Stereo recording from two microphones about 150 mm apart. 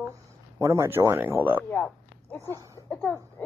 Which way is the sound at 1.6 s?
5° left (ahead or behind).